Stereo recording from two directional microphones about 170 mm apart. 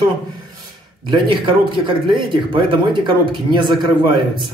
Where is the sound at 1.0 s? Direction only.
30° right (ahead or behind).